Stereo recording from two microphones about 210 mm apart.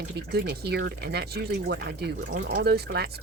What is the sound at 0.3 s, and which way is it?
Speech, 50° right (ahead or behind).